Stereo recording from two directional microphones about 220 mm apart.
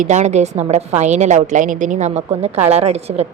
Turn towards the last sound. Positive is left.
turn(degrees=-30)  # may be behind; listen again after turning